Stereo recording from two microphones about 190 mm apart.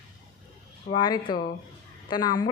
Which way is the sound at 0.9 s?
25° left (ahead or behind).